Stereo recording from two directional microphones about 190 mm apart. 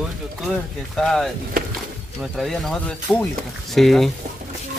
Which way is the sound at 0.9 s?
Centre (ahead or behind).